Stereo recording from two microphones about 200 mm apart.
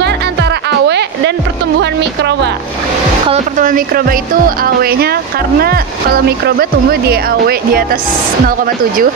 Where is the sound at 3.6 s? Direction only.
45° right (ahead or behind).